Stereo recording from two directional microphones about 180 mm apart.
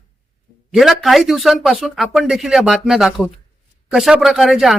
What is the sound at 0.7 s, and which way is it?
Speech, centre (ahead or behind).